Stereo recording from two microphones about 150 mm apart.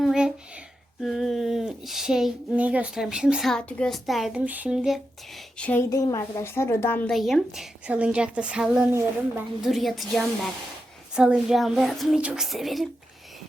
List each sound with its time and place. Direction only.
0.0 s a sound: 5° right (ahead or behind)
1.0 s speech: centre (ahead or behind)
5.5 s a woman's voice: 10° left (ahead or behind)
5.9 s a woman's voice: 25° left (ahead or behind)
7.1 s speech: centre (ahead or behind)